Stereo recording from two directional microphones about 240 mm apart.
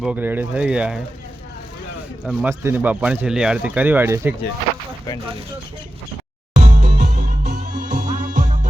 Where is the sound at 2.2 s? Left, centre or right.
Centre.